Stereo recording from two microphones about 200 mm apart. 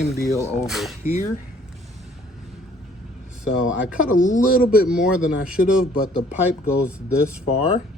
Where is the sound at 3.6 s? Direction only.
5° right (ahead or behind).